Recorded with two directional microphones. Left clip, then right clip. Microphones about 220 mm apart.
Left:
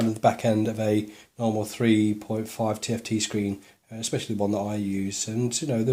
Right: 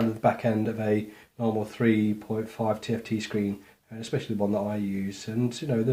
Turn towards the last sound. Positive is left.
turn(degrees=35)  # may be behind; listen again after turning